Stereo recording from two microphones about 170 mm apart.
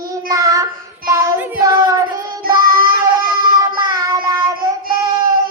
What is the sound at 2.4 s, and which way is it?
Child singing, 60° right (ahead or behind).